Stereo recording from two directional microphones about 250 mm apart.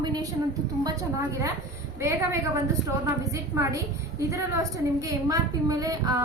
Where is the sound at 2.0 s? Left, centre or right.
Centre.